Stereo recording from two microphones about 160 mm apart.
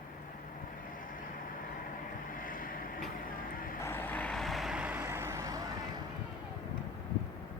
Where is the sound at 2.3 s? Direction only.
60° left (ahead or behind).